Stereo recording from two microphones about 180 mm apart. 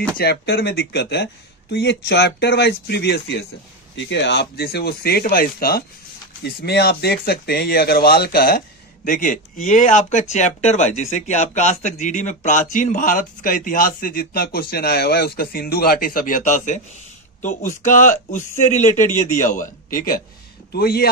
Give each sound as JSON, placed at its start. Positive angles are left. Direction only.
{"t": 0.2, "sound": "speech", "side_deg": 65}
{"t": 3.9, "sound": "speech", "side_deg": 80}